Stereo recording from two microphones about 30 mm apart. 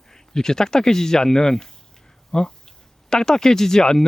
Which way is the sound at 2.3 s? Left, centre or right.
Centre.